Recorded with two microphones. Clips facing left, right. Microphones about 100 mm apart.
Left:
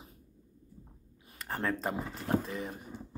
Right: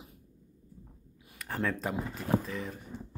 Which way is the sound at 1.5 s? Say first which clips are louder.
Right 1 dB; 25° left (ahead or behind).